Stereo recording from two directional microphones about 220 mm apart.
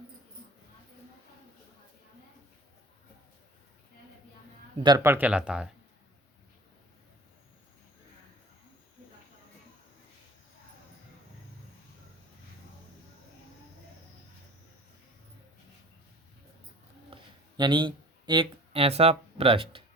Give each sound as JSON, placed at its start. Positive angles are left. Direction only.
{"t": 4.8, "sound": "speech", "side_deg": -15}
{"t": 17.1, "sound": "a sound", "side_deg": -25}
{"t": 17.6, "sound": "speech", "side_deg": -20}